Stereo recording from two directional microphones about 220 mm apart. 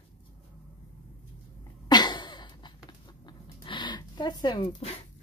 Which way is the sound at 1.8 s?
20° left (ahead or behind).